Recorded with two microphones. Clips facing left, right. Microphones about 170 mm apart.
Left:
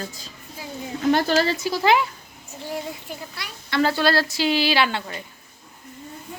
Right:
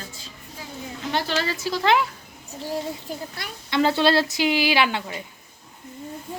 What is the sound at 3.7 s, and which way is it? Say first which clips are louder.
A woman's voice: right 1 dB; 20° right (ahead or behind).